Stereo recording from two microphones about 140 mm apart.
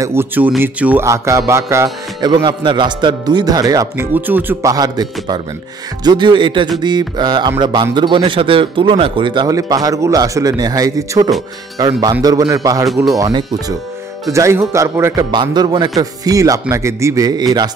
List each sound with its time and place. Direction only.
0.0 s speech: 20° right (ahead or behind)
2.3 s speech: 35° right (ahead or behind)
15.3 s speech: 30° right (ahead or behind)